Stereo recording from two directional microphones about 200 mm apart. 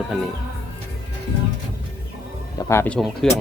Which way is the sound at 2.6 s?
15° left (ahead or behind).